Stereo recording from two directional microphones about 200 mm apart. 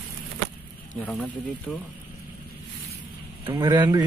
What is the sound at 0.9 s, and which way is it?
Speech, 5° left (ahead or behind).